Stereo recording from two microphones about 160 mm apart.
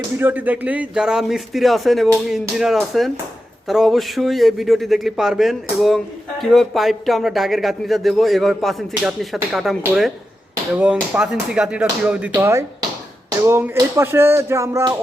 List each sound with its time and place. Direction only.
0.2 s speech: 10° right (ahead or behind)
12.3 s speech: 20° right (ahead or behind)
13.4 s a sound: 15° right (ahead or behind)